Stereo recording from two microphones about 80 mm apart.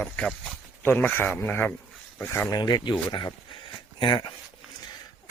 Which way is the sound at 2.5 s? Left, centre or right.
Left.